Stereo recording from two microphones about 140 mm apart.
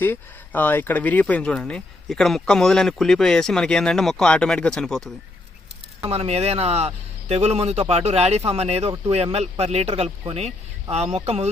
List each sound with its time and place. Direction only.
0.0 s speech: 15° left (ahead or behind)
6.1 s speech: 45° right (ahead or behind)